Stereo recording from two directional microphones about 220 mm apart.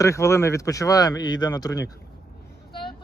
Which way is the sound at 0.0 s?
15° left (ahead or behind).